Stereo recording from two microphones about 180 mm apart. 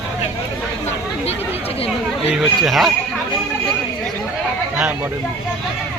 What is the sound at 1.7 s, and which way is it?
Speech, 35° left (ahead or behind).